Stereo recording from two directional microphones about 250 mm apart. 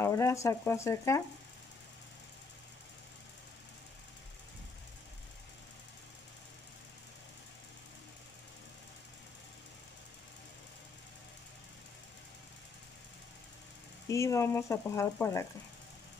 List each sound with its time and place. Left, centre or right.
0.0 s speech: centre
14.0 s speech: centre